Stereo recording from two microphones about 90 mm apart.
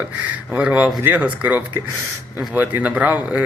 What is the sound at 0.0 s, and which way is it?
Speech, 15° right (ahead or behind).